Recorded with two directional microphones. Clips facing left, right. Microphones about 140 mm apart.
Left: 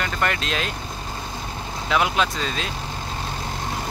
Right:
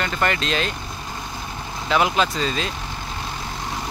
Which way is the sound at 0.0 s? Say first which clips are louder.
Right 2 dB; centre (ahead or behind).